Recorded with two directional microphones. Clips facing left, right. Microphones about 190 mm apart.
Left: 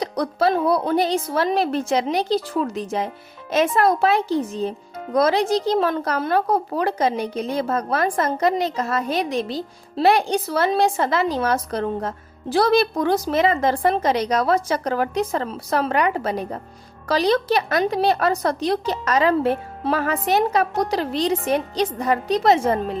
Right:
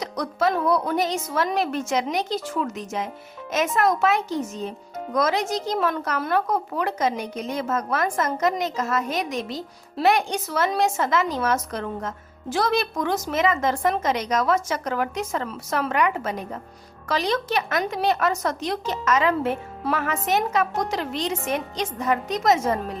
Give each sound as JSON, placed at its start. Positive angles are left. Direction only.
{"t": 0.0, "sound": "a woman's voice", "side_deg": 30}